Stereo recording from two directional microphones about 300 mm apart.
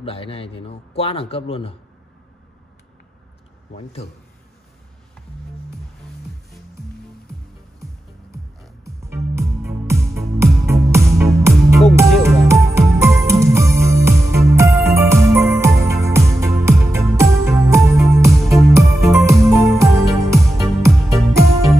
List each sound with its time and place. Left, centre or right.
0.0 s a man's voice: centre
3.7 s a man's voice: left
8.8 s music: centre